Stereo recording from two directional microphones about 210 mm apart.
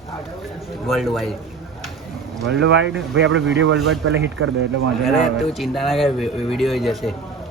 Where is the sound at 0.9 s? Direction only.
Centre (ahead or behind).